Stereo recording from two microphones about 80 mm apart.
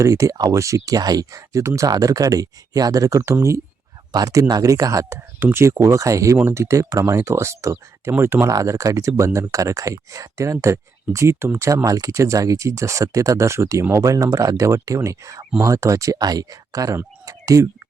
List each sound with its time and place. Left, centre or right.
0.0 s speech: right
0.9 s speech: right
8.4 s speech: right
17.2 s a sound: right